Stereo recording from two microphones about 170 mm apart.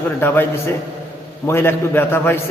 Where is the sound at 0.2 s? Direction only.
10° left (ahead or behind).